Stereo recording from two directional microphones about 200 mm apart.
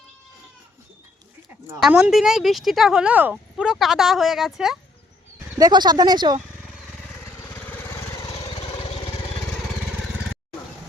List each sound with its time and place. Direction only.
1.8 s speech: centre (ahead or behind)
5.5 s speech: 20° right (ahead or behind)
7.4 s lawn mower: 10° left (ahead or behind)
8.3 s lawn mower: 30° left (ahead or behind)